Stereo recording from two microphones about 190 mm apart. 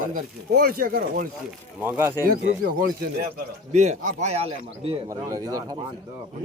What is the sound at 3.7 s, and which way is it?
A man's voice, 35° right (ahead or behind).